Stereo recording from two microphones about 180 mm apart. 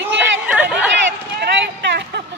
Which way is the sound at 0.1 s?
10° right (ahead or behind).